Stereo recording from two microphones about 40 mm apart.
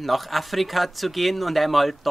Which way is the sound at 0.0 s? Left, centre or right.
Centre.